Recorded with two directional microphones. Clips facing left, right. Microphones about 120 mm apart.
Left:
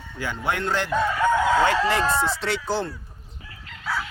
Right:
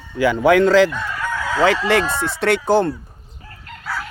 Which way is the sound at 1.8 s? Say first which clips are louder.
Right 3 dB; 65° right (ahead or behind).